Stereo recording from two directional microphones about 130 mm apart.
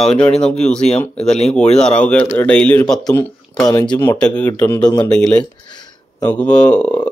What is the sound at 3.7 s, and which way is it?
Speech, 30° left (ahead or behind).